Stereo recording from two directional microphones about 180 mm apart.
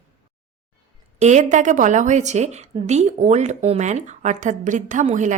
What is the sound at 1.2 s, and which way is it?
A woman's voice, 40° right (ahead or behind).